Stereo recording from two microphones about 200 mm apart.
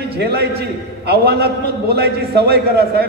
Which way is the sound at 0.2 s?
55° right (ahead or behind).